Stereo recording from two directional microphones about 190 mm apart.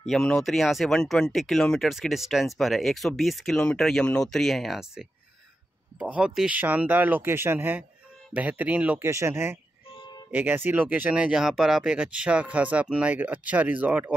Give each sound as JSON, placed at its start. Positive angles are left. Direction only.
{"t": 0.1, "sound": "speech", "side_deg": 0}